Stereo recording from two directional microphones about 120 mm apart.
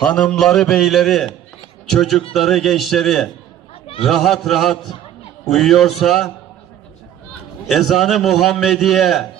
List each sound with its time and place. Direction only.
0.0 s a man's voice: 10° left (ahead or behind)
7.7 s a man's voice: centre (ahead or behind)